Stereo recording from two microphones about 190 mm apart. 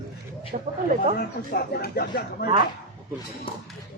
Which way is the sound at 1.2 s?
55° left (ahead or behind).